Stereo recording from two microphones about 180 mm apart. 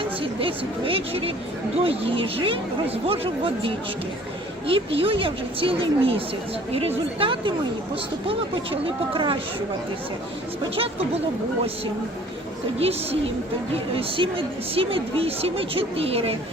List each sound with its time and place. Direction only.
0.2 s a woman's voice: 30° right (ahead or behind)
12.8 s a woman's voice: 35° right (ahead or behind)